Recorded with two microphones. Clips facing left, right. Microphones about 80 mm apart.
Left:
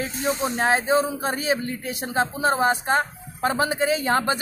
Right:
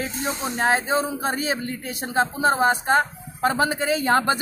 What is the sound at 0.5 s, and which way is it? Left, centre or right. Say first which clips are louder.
Speech: even; right.